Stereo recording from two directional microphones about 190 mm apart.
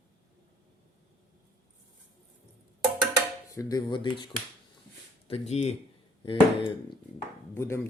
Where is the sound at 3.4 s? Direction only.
15° left (ahead or behind).